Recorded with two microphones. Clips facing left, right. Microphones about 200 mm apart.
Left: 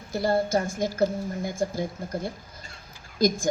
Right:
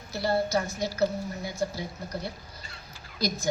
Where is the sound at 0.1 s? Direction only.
50° left (ahead or behind).